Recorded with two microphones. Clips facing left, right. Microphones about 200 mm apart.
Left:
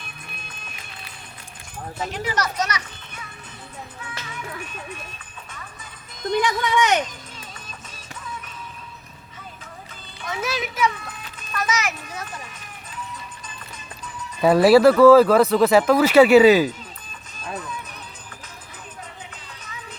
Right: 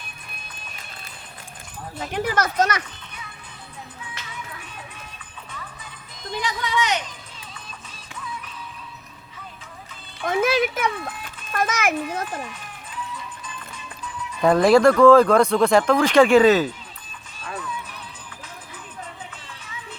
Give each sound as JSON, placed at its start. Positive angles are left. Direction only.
{"t": 2.1, "sound": "speech", "side_deg": -55}
{"t": 6.3, "sound": "speech", "side_deg": 55}
{"t": 10.2, "sound": "speech", "side_deg": -50}
{"t": 14.4, "sound": "speech", "side_deg": 5}